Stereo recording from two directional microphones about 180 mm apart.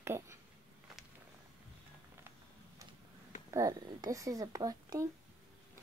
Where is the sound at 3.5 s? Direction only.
20° right (ahead or behind).